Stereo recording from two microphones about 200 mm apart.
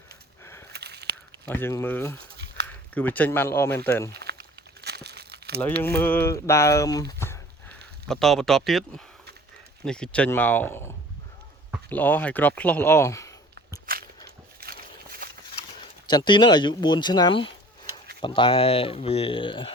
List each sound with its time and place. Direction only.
0.7 s a sound: 55° right (ahead or behind)
1.5 s speech: 10° left (ahead or behind)
4.1 s crumpling: 55° right (ahead or behind)
5.8 s speech: 10° left (ahead or behind)
7.2 s a sound: 10° left (ahead or behind)
8.0 s speech: centre (ahead or behind)
9.8 s speech: 5° left (ahead or behind)
14.6 s walk: 50° right (ahead or behind)
15.8 s speech: 20° left (ahead or behind)